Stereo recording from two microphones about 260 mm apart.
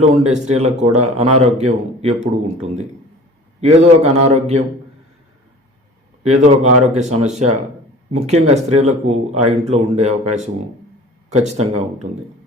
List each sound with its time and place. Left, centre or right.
0.0 s a man's voice: right
6.2 s a man's voice: right